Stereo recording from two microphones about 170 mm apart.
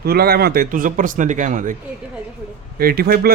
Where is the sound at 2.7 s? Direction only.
60° right (ahead or behind).